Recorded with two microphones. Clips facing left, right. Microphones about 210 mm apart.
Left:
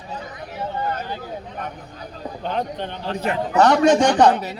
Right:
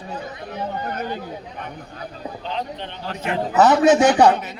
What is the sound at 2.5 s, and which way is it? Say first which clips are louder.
Speech: left 5 dB; 50° left (ahead or behind).